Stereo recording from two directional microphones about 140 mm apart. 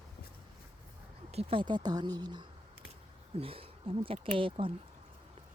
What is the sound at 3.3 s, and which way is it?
Speech, 40° right (ahead or behind).